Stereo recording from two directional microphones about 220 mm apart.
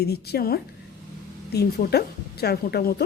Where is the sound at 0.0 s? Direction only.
45° left (ahead or behind).